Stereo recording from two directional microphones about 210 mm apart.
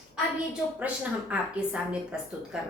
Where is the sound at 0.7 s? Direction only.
5° right (ahead or behind).